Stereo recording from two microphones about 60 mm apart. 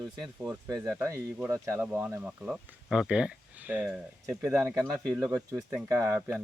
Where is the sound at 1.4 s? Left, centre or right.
Right.